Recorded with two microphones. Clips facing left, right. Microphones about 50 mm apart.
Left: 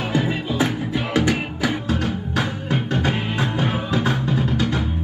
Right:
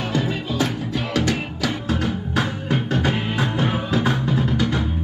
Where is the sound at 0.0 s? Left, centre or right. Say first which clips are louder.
Left 1 dB; centre.